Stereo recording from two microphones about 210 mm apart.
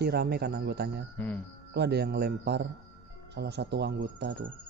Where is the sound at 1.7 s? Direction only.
50° right (ahead or behind).